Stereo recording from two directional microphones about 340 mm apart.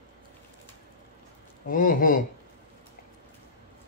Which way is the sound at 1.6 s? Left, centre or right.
Left.